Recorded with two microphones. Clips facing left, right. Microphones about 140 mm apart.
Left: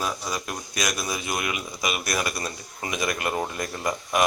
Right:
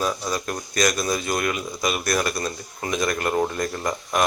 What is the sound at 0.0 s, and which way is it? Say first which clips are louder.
Speech: right 4 dB; 5° left (ahead or behind).